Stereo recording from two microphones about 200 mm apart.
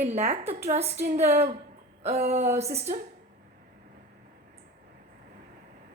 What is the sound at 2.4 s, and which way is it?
Speech, 10° right (ahead or behind).